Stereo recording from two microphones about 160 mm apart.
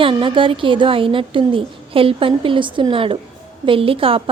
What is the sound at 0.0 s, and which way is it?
A woman's voice, 30° right (ahead or behind).